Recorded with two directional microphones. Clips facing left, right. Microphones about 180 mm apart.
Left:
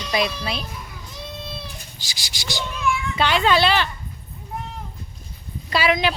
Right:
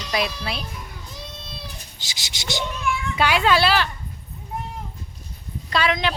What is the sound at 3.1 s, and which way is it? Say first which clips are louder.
Speech: even; 10° right (ahead or behind).